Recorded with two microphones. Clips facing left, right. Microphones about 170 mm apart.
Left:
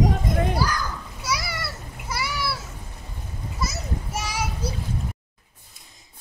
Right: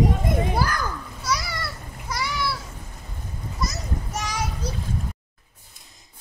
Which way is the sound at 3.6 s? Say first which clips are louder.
Even; 5° left (ahead or behind).